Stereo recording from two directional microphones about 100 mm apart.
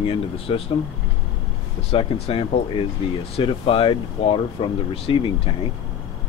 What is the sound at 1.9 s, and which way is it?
Speech, 80° left.